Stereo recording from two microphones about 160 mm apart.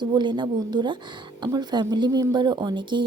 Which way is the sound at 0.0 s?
25° right (ahead or behind).